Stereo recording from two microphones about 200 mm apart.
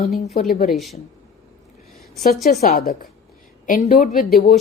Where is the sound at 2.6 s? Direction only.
45° left (ahead or behind).